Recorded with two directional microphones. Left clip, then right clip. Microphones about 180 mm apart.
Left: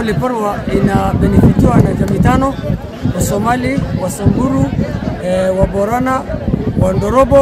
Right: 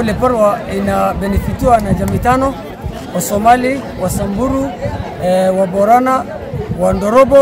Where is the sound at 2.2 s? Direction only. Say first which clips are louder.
Right 2 dB; 35° right (ahead or behind).